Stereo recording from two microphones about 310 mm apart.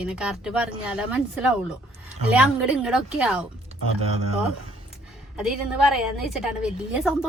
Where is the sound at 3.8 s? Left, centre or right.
Left.